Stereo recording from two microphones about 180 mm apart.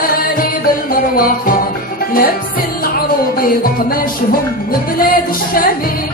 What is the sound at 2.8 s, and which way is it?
Music, 55° left (ahead or behind).